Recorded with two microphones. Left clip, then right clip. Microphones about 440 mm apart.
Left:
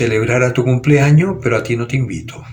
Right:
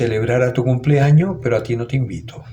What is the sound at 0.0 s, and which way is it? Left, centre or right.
Speech, right.